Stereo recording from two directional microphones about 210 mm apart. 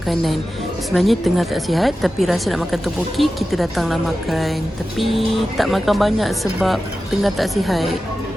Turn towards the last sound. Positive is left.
turn(degrees=0)  # may be behind; listen again after turning